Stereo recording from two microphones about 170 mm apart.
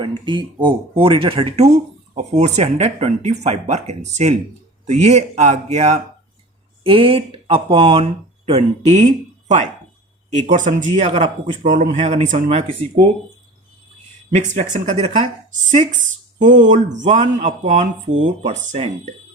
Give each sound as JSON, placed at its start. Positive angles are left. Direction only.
{"t": 0.3, "sound": "speech", "side_deg": -30}
{"t": 10.2, "sound": "speech", "side_deg": -45}
{"t": 14.3, "sound": "speech", "side_deg": -45}
{"t": 16.4, "sound": "speech", "side_deg": -45}